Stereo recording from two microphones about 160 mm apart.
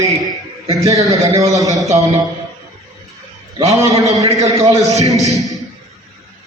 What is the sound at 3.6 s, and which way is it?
A man's voice, 20° right (ahead or behind).